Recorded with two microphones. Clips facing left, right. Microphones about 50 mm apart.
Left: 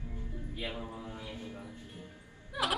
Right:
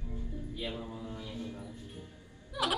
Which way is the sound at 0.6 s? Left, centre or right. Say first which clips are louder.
Even; left.